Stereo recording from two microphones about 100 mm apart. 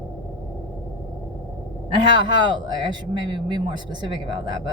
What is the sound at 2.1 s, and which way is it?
A man's voice, 45° right (ahead or behind).